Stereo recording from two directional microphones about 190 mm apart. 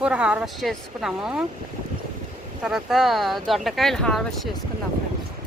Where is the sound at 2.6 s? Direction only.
Centre (ahead or behind).